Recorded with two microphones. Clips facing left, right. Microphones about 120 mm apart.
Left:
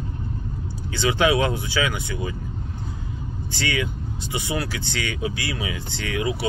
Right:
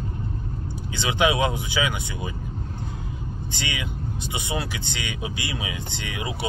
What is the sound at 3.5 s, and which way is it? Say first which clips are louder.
Speech: left 7 dB; 20° right (ahead or behind).